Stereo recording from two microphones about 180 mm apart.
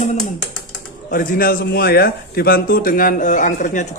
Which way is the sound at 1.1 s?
55° left (ahead or behind).